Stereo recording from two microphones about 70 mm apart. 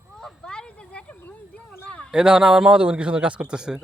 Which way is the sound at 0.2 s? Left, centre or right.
Centre.